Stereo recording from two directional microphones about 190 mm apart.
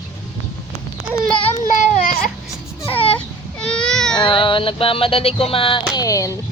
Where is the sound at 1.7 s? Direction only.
40° left (ahead or behind).